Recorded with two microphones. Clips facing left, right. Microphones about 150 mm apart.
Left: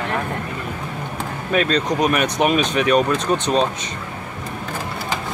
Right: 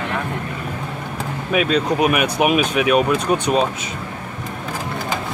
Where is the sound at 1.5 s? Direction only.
5° right (ahead or behind).